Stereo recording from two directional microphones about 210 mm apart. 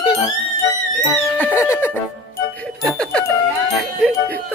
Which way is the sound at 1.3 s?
10° left (ahead or behind).